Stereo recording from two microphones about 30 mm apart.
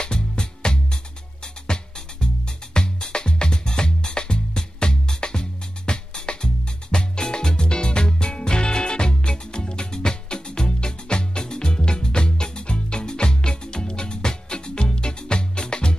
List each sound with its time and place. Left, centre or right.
0.0 s music: left